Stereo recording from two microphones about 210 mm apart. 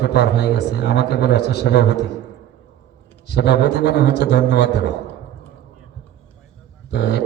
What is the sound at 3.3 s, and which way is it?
A man's voice, 50° left (ahead or behind).